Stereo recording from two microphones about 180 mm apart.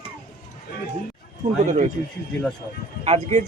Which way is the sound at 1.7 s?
40° right (ahead or behind).